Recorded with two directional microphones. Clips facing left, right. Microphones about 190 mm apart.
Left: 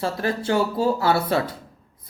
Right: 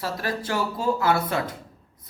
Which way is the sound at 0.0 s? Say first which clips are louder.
Left 4 dB; 25° left (ahead or behind).